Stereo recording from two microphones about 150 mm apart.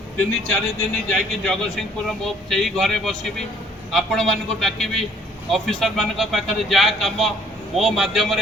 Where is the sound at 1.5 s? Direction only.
5° left (ahead or behind).